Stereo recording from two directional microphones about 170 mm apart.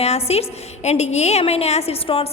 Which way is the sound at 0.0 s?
40° left (ahead or behind).